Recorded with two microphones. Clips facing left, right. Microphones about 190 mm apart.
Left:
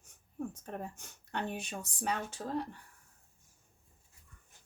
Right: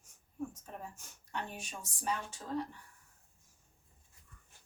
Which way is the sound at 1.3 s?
65° left (ahead or behind).